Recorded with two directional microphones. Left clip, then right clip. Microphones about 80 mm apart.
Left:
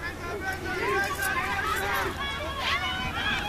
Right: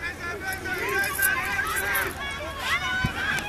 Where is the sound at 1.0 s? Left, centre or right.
Right.